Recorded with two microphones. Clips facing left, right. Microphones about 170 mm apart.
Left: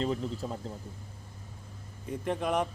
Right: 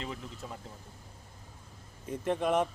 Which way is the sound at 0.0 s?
35° left (ahead or behind).